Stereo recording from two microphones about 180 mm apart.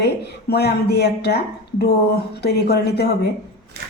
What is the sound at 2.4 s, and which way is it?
Speech, 65° left (ahead or behind).